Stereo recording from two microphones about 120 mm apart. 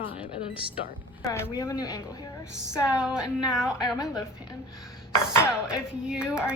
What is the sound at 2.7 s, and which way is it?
A woman's voice, 5° right (ahead or behind).